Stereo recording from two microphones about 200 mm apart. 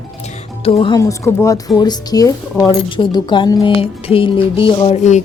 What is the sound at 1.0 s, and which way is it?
Speech, 15° left (ahead or behind).